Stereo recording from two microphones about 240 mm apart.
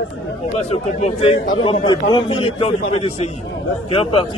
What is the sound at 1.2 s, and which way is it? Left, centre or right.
A man's voice, left.